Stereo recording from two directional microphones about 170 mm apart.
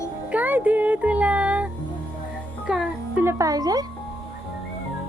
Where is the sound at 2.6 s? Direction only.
5° right (ahead or behind).